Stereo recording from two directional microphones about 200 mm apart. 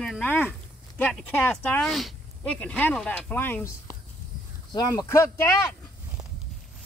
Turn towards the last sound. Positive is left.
turn(degrees=15)  # may be behind; listen again after turning